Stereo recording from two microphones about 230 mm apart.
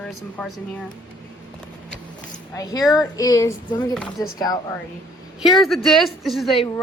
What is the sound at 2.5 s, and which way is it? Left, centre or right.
A woman's voice, centre.